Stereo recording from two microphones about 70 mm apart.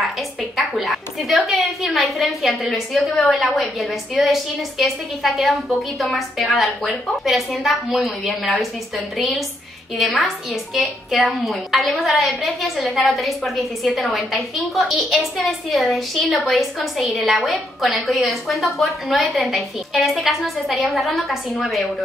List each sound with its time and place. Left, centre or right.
0.6 s a woman's voice: centre